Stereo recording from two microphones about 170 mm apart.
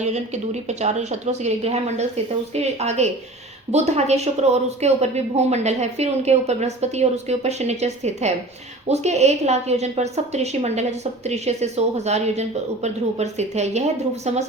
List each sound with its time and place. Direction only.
0.0 s a woman's voice: 40° right (ahead or behind)